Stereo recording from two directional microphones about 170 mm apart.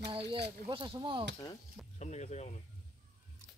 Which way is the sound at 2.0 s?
40° left (ahead or behind).